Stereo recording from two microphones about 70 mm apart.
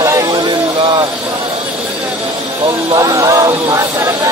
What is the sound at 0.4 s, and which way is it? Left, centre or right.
Music, right.